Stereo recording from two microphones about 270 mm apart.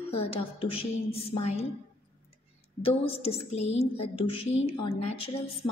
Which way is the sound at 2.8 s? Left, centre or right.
Left.